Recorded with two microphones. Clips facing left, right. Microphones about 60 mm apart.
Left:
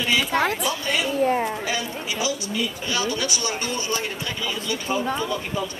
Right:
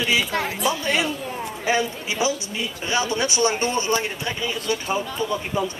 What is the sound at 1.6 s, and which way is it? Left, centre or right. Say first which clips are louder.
A man's voice: right 5 dB; right.